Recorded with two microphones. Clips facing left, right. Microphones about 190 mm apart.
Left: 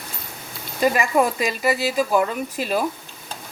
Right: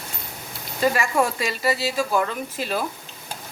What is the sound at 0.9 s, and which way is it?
Speech, 15° left (ahead or behind).